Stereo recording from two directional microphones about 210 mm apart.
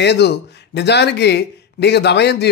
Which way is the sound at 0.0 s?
55° left (ahead or behind).